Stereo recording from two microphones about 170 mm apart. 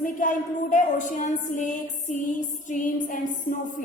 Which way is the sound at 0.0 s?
50° left (ahead or behind).